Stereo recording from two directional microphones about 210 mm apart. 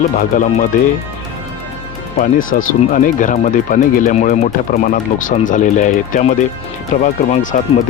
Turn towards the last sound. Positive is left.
turn(degrees=35)  # may be behind; listen again after turning